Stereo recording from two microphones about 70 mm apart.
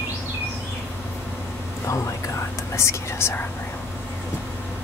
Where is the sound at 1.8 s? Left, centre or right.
Left.